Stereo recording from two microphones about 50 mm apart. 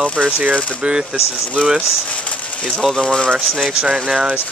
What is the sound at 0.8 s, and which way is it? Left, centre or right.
Speech, centre.